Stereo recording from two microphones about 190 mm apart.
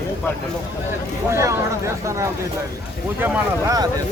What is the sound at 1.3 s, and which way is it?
Speech, 15° right (ahead or behind).